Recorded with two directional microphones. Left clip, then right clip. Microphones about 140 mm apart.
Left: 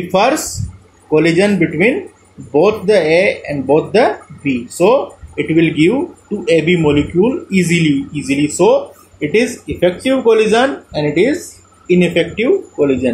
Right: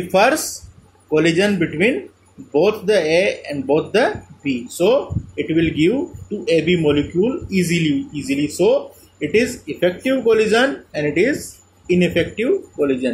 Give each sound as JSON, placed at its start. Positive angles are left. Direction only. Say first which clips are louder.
{"t": 0.1, "sound": "a man's voice", "louder": "left 2 dB", "side_deg": -20}